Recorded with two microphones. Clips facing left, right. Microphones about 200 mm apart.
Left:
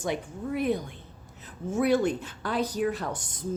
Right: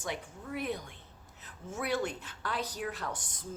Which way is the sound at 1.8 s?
20° left (ahead or behind).